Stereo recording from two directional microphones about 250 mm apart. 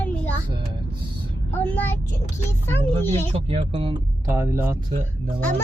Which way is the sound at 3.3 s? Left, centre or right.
Right.